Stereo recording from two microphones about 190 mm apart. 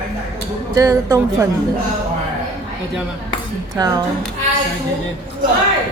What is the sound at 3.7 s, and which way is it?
Speech, 20° right (ahead or behind).